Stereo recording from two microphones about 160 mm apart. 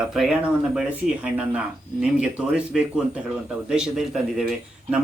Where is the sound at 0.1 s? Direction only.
Centre (ahead or behind).